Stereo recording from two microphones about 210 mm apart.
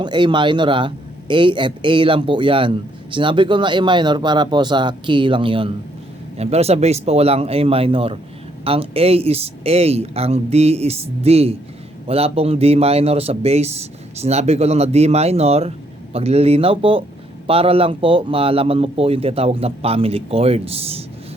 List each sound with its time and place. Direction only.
0.0 s a man's voice: 20° right (ahead or behind)